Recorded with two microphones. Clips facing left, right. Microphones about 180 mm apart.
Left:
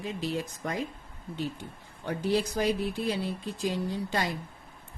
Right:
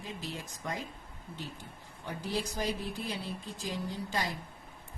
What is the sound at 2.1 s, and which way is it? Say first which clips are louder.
Speech: left 8 dB; 70° left (ahead or behind).